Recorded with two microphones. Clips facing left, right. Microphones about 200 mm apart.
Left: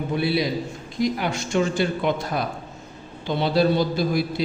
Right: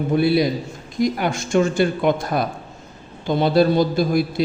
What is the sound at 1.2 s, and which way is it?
A man's voice, 50° right (ahead or behind).